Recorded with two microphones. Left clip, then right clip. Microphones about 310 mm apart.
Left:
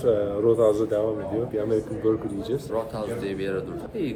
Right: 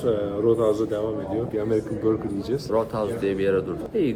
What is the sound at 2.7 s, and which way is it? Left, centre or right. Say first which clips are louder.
Speech: right 4 dB; centre.